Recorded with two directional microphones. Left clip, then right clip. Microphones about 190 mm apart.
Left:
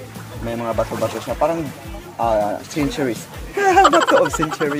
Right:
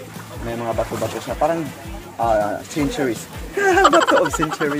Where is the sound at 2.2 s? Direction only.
25° left (ahead or behind).